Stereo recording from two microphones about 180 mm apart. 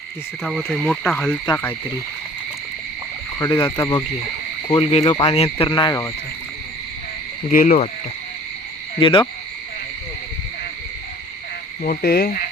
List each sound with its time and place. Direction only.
0.4 s speech: centre (ahead or behind)
3.3 s speech: 20° left (ahead or behind)
4.7 s speech: 35° left (ahead or behind)
7.5 s speech: 50° left (ahead or behind)
9.0 s speech: 30° left (ahead or behind)
11.8 s cricket: 55° left (ahead or behind)